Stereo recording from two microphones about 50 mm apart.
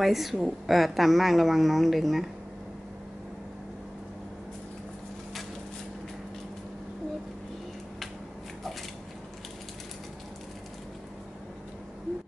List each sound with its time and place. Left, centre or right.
0.0 s speech: centre